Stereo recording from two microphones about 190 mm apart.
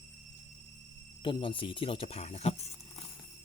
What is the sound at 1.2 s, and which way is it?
Speech, 25° left (ahead or behind).